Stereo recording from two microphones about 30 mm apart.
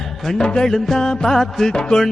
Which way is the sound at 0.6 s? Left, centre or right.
Centre.